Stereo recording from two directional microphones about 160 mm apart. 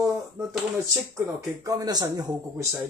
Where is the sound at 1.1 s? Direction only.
20° right (ahead or behind).